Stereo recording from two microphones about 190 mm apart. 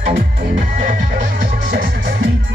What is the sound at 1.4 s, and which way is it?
Music, 55° right (ahead or behind).